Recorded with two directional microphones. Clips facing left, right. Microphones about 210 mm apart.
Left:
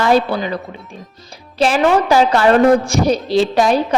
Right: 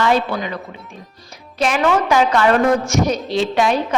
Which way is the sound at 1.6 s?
30° left (ahead or behind).